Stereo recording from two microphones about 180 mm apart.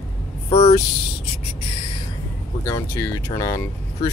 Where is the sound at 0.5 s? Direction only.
35° left (ahead or behind).